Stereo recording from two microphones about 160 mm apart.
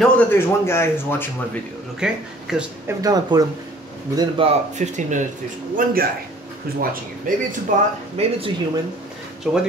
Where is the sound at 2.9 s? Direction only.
25° right (ahead or behind).